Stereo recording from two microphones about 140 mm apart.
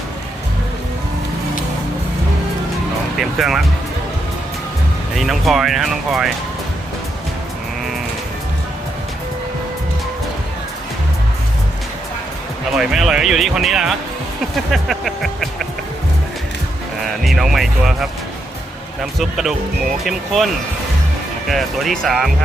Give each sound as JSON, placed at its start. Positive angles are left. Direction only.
{"t": 3.2, "sound": "speech", "side_deg": 0}
{"t": 5.1, "sound": "speech", "side_deg": 0}
{"t": 12.7, "sound": "speech", "side_deg": 0}
{"t": 17.0, "sound": "speech", "side_deg": 0}
{"t": 19.2, "sound": "speech", "side_deg": 0}
{"t": 21.5, "sound": "speech", "side_deg": 0}